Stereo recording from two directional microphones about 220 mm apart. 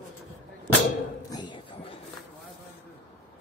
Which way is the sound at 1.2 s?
20° left (ahead or behind).